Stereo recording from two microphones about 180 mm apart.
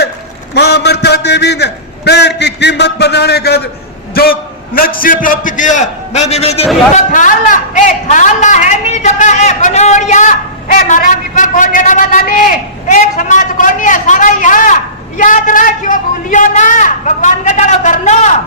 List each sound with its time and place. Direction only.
0.5 s a man's voice: 70° left (ahead or behind)
4.1 s a sound: 60° left (ahead or behind)
5.0 s a man's voice: 50° left (ahead or behind)
6.9 s a man's voice: 45° left (ahead or behind)